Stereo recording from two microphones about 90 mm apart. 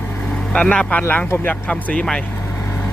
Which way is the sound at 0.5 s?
10° left (ahead or behind).